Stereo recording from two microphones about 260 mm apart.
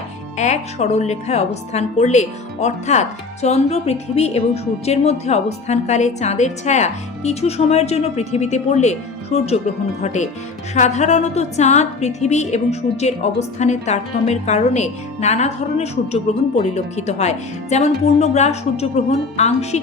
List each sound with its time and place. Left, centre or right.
0.3 s a woman's voice: left